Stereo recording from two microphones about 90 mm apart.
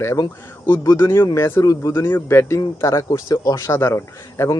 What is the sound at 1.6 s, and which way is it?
Speech, 45° left (ahead or behind).